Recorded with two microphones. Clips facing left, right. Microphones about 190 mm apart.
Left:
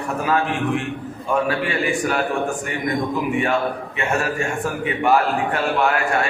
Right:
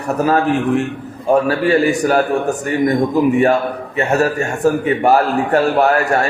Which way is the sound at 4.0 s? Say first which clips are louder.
Right 8 dB; 40° right (ahead or behind).